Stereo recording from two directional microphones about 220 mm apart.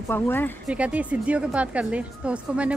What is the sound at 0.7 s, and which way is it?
Speech, 5° right (ahead or behind).